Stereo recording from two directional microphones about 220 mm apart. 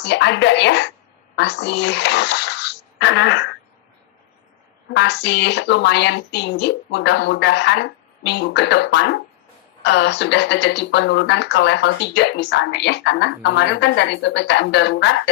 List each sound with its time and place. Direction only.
0.0 s a woman's voice: 50° left (ahead or behind)
4.9 s speech: 50° left (ahead or behind)